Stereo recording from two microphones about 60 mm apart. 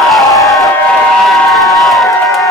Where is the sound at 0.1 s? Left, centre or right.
Centre.